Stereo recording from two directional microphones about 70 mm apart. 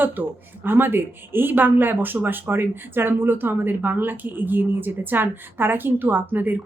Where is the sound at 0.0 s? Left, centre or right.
Right.